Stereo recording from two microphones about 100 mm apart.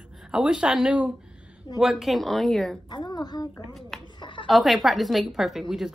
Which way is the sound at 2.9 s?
45° left (ahead or behind).